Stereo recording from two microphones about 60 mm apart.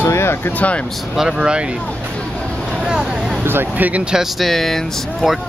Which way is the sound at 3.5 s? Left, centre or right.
Right.